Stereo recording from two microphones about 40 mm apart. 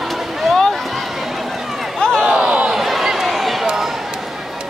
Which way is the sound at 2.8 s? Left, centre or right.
Centre.